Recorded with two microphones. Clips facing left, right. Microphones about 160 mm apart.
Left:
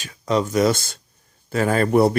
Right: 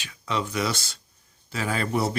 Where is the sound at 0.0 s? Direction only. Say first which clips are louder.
Left 8 dB; 40° left (ahead or behind).